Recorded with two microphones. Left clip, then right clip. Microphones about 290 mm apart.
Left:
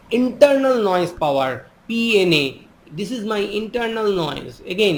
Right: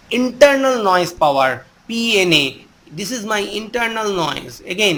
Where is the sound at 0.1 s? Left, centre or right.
Right.